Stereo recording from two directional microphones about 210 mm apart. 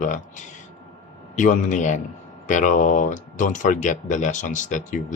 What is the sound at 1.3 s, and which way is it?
Speech, 35° left (ahead or behind).